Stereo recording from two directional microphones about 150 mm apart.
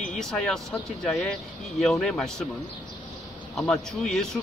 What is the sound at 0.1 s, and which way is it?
A man's voice, 5° left (ahead or behind).